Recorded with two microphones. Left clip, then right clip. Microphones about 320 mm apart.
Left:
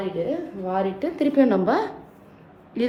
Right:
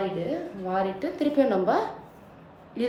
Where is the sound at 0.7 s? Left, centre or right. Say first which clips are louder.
Left 2 dB; centre.